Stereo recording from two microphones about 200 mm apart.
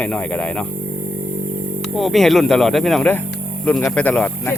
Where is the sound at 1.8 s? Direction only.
Centre (ahead or behind).